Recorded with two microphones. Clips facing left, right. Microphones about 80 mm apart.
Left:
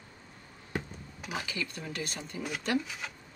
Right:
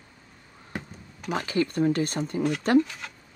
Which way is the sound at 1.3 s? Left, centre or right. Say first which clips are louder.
Right 11 dB; right.